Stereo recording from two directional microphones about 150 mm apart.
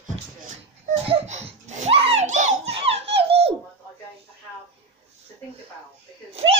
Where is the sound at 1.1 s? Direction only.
45° right (ahead or behind).